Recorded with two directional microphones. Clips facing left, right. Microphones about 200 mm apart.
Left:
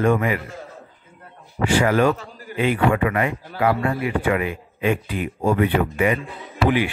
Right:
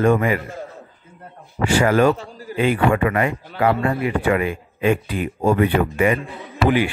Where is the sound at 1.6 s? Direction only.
45° right (ahead or behind).